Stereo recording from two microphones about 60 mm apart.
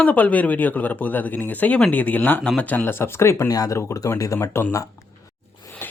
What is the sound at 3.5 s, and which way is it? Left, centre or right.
Speech, left.